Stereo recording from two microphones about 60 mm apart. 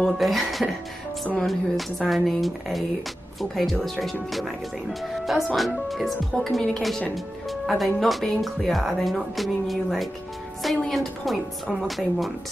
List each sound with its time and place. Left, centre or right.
0.0 s speech: centre